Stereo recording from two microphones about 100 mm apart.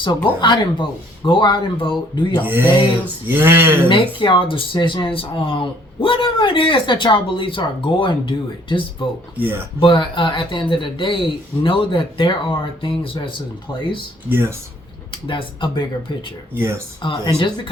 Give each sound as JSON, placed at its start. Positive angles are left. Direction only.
{"t": 0.4, "sound": "speech", "side_deg": 50}
{"t": 2.4, "sound": "speech", "side_deg": -20}
{"t": 3.8, "sound": "speech", "side_deg": 55}
{"t": 14.3, "sound": "speech", "side_deg": -20}
{"t": 15.1, "sound": "speech", "side_deg": 55}
{"t": 16.6, "sound": "speech", "side_deg": -25}
{"t": 17.0, "sound": "speech", "side_deg": 50}